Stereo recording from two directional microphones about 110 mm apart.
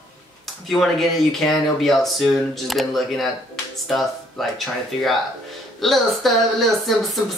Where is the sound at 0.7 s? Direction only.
5° left (ahead or behind).